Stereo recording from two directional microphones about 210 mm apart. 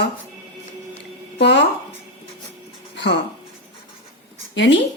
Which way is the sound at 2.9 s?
55° left (ahead or behind).